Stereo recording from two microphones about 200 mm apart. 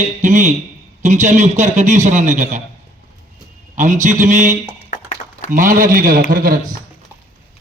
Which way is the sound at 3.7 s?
35° right (ahead or behind).